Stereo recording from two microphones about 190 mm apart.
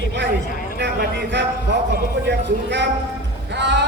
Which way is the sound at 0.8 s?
65° right (ahead or behind).